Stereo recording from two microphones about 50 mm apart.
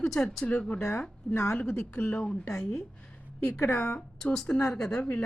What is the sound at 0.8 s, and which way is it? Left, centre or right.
Speech, left.